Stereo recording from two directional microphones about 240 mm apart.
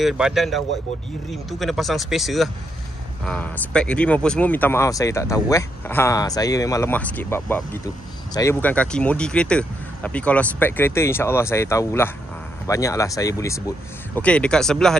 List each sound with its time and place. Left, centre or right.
0.0 s speech: centre